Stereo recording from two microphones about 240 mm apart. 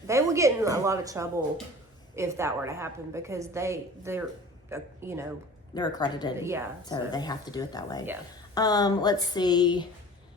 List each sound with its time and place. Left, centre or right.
0.1 s a woman's voice: centre
5.7 s speech: centre
6.4 s a woman's voice: centre
6.8 s speech: centre